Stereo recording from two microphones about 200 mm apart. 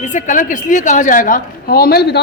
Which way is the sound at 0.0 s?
35° left (ahead or behind).